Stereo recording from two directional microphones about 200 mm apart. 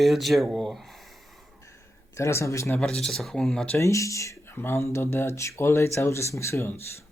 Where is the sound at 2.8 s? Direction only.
Centre (ahead or behind).